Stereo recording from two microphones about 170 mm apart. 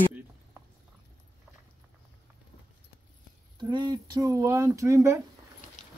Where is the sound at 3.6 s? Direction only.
25° right (ahead or behind).